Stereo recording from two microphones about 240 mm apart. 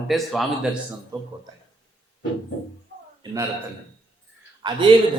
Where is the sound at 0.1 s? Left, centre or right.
Centre.